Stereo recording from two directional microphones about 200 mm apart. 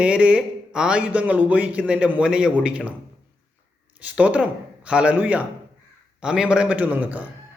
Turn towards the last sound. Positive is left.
turn(degrees=-5)  # may be behind; listen again after turning